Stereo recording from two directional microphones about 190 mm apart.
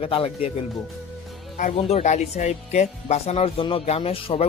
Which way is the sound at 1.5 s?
40° left (ahead or behind).